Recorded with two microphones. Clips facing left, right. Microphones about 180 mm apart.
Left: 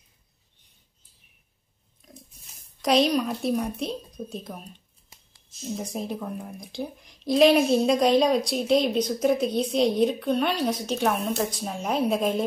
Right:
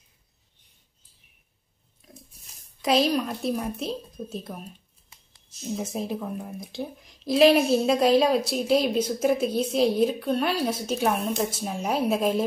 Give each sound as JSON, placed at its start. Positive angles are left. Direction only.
{"t": 2.8, "sound": "speech", "side_deg": -5}